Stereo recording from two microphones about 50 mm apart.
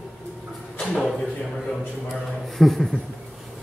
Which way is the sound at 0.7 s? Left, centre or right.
Centre.